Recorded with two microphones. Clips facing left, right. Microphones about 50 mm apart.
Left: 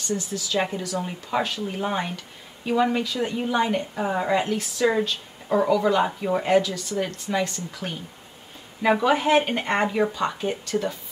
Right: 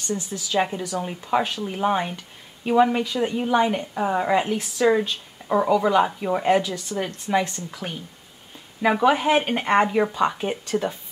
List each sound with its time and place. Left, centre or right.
0.1 s speech: centre
0.6 s a woman's voice: centre
6.7 s speech: right
9.0 s a woman's voice: centre